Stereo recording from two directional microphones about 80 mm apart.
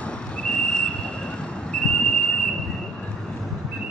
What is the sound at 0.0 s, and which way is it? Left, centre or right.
Vehicle, centre.